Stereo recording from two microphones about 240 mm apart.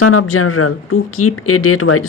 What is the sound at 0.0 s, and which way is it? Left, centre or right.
Speech, left.